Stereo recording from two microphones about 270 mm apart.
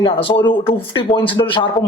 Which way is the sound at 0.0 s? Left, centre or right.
Centre.